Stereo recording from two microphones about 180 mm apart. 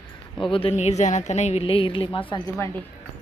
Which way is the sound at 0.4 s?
30° left (ahead or behind).